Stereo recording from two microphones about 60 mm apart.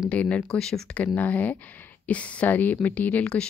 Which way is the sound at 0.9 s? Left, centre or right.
Left.